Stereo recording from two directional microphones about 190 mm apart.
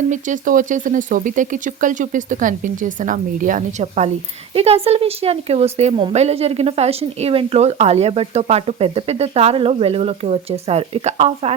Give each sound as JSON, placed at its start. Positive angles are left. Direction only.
{"t": 0.1, "sound": "speech", "side_deg": -45}